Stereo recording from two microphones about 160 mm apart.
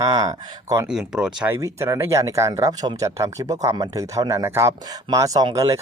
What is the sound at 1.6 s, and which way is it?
Speech, 20° right (ahead or behind).